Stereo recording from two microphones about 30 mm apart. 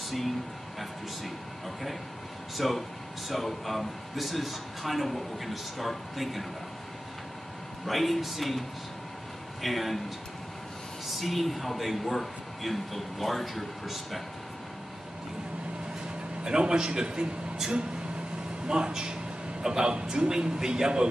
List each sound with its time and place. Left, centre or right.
2.5 s a man's voice: centre
7.8 s a man's voice: centre
11.1 s a man's voice: centre
16.4 s speech: right
18.7 s speech: right